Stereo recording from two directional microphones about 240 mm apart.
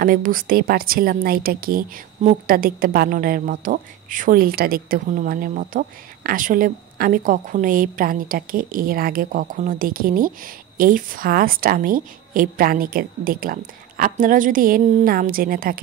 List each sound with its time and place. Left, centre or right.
0.0 s a woman's voice: right